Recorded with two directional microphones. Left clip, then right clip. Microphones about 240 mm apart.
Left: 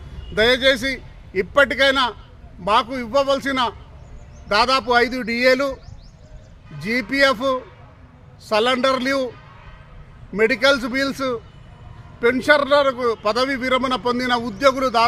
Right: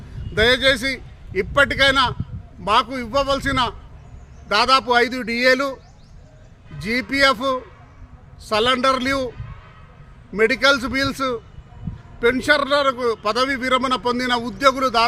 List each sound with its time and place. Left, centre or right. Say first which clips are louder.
0.3 s a man's voice: even; centre
6.7 s a man's voice: left 1 dB; centre
10.3 s a man's voice: even; centre